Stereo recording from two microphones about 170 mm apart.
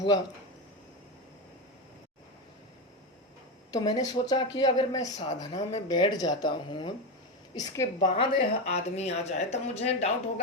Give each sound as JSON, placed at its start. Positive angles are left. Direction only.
{"t": 3.7, "sound": "speech", "side_deg": 20}
{"t": 8.1, "sound": "a woman's voice", "side_deg": 35}